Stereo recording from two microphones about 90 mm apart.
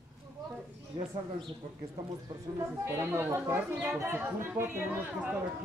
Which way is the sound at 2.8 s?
30° right (ahead or behind).